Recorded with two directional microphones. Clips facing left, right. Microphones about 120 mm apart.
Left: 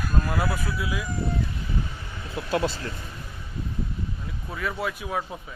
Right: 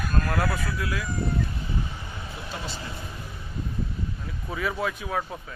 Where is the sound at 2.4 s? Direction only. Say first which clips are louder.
Left 6 dB; 90° left.